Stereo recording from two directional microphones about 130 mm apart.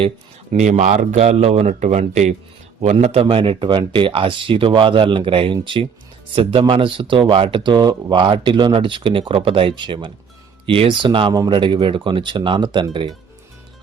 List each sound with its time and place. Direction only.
0.5 s speech: 65° right (ahead or behind); by 13.1 s 35° right (ahead or behind)